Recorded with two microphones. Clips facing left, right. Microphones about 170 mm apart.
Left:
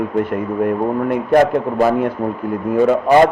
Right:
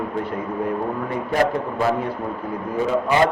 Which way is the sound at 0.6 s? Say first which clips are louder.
Left 8 dB; 60° left (ahead or behind).